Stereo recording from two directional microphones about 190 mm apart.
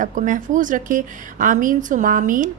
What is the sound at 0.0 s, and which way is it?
A woman's voice, 40° right (ahead or behind).